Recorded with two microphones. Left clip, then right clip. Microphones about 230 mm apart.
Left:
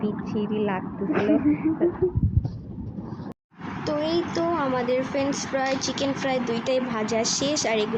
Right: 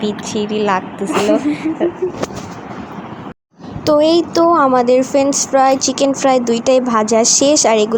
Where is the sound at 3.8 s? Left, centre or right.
Right.